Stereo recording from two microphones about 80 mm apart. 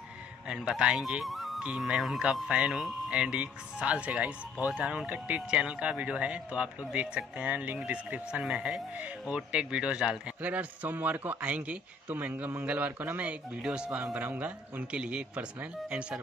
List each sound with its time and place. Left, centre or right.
0.5 s speech: centre
1.6 s a man's voice: centre